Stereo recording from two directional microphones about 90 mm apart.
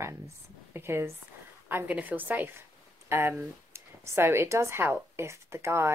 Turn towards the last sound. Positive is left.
turn(degrees=-30)  # may be behind; listen again after turning